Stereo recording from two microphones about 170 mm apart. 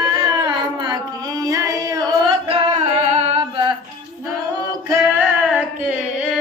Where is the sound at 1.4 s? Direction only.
20° right (ahead or behind).